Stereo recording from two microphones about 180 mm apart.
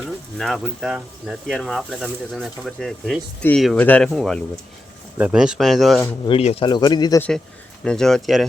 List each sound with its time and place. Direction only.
0.3 s speech: centre (ahead or behind)
6.2 s speech: 35° left (ahead or behind)
7.2 s speech: 5° left (ahead or behind)